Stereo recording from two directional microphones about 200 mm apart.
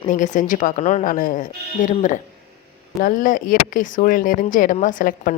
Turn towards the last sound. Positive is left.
turn(degrees=45)  # may be behind; listen again after turning